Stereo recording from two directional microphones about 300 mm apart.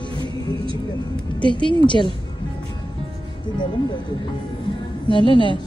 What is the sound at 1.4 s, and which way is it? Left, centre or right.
Speech, centre.